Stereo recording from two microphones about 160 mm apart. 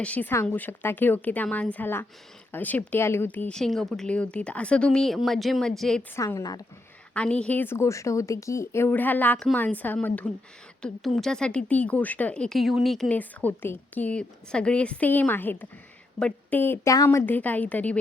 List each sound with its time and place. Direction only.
0.0 s speech: 10° left (ahead or behind)
6.1 s speech: 20° left (ahead or behind)
7.1 s a woman's voice: 5° left (ahead or behind)